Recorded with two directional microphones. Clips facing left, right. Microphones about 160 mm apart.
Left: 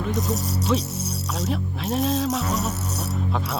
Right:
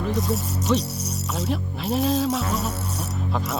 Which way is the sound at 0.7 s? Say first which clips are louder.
Right 2 dB; centre (ahead or behind).